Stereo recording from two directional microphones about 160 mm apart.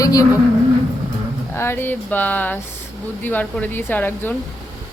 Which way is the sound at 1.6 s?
15° left (ahead or behind).